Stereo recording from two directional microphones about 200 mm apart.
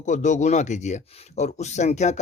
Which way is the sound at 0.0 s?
35° left (ahead or behind).